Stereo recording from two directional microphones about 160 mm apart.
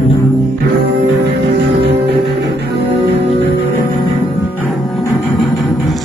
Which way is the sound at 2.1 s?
90° right.